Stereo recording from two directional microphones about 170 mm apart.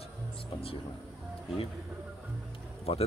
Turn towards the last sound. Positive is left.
turn(degrees=35)  # may be behind; listen again after turning